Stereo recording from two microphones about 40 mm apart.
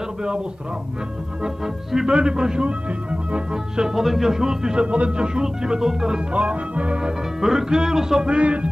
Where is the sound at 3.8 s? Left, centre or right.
Centre.